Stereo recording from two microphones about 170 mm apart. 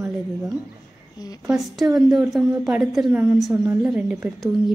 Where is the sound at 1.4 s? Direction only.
Centre (ahead or behind).